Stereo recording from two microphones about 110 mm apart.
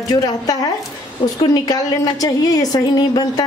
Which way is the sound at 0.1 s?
35° left (ahead or behind).